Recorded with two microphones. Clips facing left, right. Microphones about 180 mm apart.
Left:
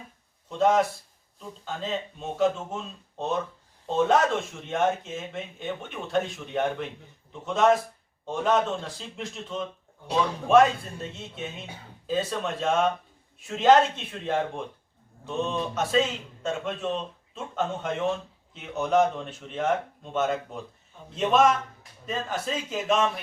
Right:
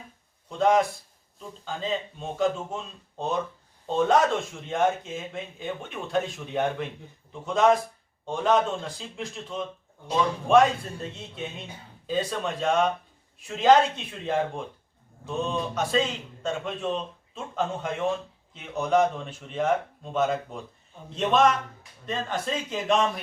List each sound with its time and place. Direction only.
0.6 s speech: 5° left (ahead or behind)